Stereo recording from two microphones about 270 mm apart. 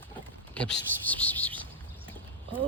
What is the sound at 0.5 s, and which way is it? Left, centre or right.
Speech, centre.